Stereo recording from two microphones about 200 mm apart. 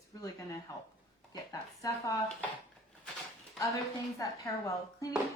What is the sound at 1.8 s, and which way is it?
Speech, 15° left (ahead or behind).